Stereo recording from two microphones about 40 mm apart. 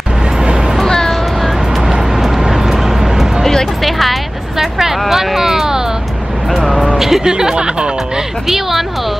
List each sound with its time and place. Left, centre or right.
0.4 s music: centre
0.8 s a sound: centre
1.8 s vehicle: centre
3.4 s music: centre
4.6 s hubbub: centre
7.0 s speech: centre
8.5 s speech: centre